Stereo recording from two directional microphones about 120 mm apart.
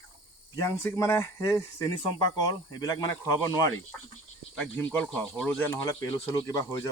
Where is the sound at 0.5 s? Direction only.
25° left (ahead or behind).